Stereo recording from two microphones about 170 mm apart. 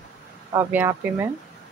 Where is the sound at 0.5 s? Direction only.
15° right (ahead or behind).